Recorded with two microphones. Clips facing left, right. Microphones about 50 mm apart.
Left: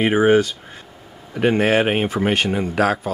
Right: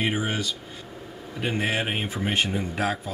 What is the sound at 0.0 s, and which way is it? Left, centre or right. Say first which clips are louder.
Speech: left 12 dB; left.